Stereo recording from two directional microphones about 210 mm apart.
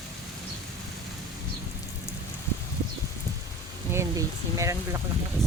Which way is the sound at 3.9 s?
15° right (ahead or behind).